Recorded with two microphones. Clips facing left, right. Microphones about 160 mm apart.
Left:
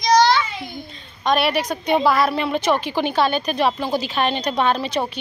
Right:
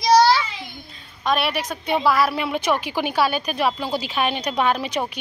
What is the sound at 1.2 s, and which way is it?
A woman's voice, centre (ahead or behind).